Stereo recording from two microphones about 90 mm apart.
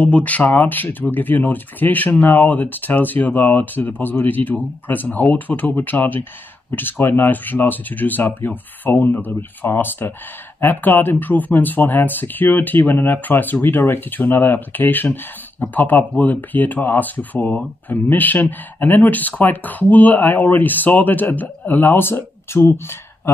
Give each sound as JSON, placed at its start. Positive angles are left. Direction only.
{"t": 0.0, "sound": "speech", "side_deg": 15}